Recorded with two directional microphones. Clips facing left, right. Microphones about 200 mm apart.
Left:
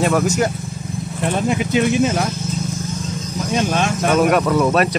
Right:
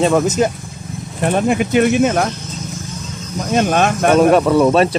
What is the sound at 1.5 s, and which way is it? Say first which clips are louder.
Speech: right 3 dB; 55° right (ahead or behind).